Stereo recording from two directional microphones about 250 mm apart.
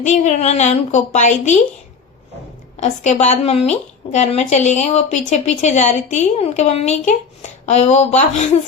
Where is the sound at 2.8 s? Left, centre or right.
Left.